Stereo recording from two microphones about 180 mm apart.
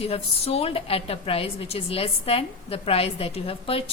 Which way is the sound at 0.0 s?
35° left (ahead or behind).